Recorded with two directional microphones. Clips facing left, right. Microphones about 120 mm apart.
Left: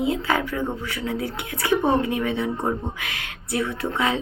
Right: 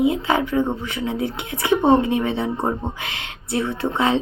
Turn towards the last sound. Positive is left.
turn(degrees=-30)  # may be behind; listen again after turning